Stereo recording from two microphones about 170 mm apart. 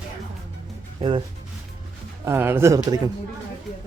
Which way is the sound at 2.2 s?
15° right (ahead or behind).